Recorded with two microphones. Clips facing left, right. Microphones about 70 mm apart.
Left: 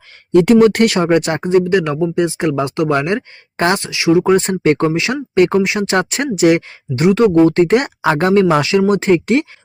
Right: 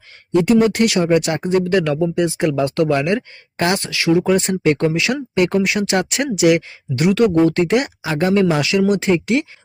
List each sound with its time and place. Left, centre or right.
0.4 s speech: left
0.9 s speech: left
3.8 s speech: centre
4.3 s speech: left